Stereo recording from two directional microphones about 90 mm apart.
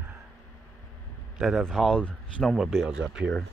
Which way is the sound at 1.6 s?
5° left (ahead or behind).